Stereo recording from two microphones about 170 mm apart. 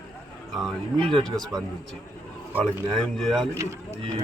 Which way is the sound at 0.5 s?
Centre (ahead or behind).